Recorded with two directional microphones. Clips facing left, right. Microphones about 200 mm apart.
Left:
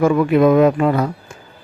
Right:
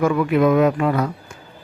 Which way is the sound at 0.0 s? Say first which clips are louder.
Left 4 dB; 30° left (ahead or behind).